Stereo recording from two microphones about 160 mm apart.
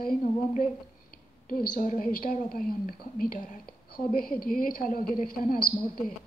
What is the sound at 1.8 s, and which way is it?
Speech, 55° left (ahead or behind).